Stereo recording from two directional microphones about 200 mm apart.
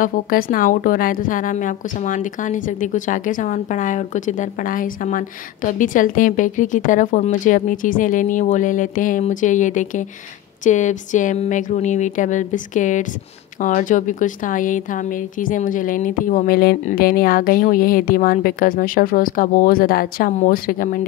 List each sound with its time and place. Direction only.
0.0 s a woman's voice: 45° left (ahead or behind)